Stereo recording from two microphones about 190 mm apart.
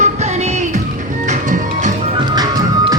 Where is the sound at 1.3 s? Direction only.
40° right (ahead or behind).